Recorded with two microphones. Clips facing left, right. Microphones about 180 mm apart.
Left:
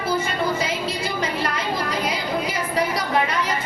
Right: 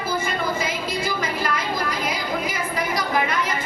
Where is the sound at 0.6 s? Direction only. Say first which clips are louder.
Left 1 dB; 30° left (ahead or behind).